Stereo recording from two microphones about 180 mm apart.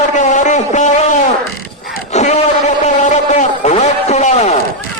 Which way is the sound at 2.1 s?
40° left (ahead or behind).